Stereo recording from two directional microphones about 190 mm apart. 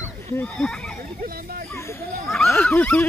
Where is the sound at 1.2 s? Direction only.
50° right (ahead or behind).